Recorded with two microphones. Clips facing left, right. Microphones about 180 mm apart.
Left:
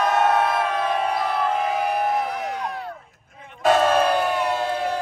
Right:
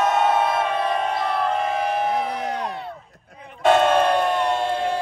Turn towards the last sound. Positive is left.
turn(degrees=5)  # may be behind; listen again after turning